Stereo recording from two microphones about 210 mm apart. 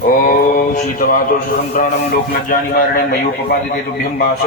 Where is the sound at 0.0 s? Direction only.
40° left (ahead or behind).